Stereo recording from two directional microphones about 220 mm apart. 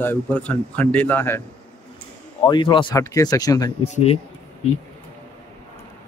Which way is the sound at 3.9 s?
30° left (ahead or behind).